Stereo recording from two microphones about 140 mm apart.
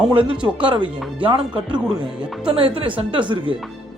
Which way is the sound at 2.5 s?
40° right (ahead or behind).